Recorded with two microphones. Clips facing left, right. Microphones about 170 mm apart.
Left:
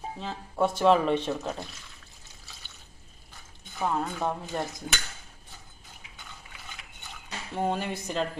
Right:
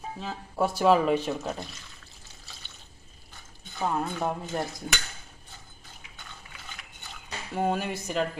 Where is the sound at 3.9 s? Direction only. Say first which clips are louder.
Even; 10° right (ahead or behind).